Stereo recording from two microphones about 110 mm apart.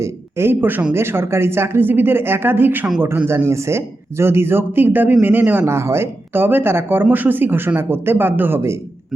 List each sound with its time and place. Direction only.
0.0 s speech: 20° right (ahead or behind)